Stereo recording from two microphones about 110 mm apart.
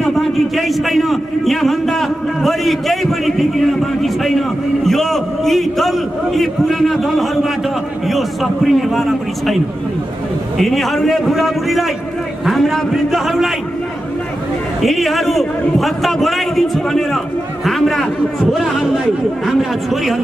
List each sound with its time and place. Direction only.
0.1 s a man's voice: centre (ahead or behind)
10.6 s a man's voice: centre (ahead or behind)
14.8 s a man's voice: centre (ahead or behind)